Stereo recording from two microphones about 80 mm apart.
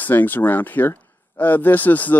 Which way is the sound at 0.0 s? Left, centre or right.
Left.